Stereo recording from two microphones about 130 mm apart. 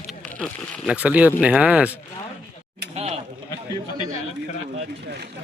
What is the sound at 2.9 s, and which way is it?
Goat, 55° right (ahead or behind).